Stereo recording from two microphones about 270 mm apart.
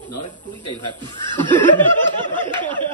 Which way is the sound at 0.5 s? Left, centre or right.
Centre.